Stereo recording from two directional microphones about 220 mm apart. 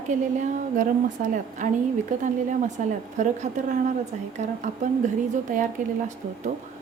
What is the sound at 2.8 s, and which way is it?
A woman's voice, 35° right (ahead or behind).